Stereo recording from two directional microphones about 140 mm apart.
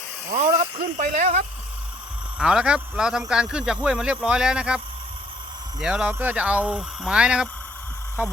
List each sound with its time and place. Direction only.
0.3 s speech: 60° right (ahead or behind)
2.4 s a man's voice: 5° right (ahead or behind)
5.8 s speech: 5° right (ahead or behind)